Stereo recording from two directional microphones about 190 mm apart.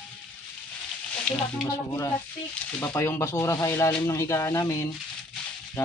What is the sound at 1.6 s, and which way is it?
Speech, 15° left (ahead or behind).